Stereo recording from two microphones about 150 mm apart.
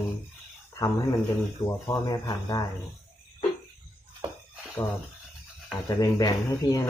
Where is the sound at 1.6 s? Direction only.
25° left (ahead or behind).